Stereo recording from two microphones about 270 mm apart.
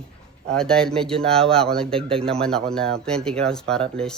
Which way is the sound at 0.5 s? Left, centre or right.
Centre.